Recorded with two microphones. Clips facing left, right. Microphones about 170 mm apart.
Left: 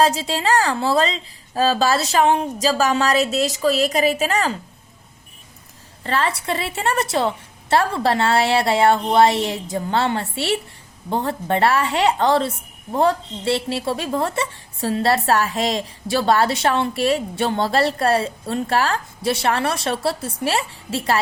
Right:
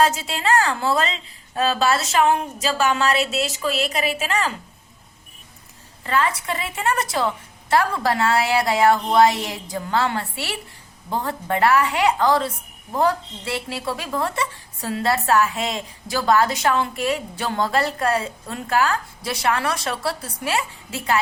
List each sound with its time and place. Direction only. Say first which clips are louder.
0.0 s a woman's voice: left 2 dB; 30° left (ahead or behind)
6.0 s a woman's voice: even; 35° left (ahead or behind)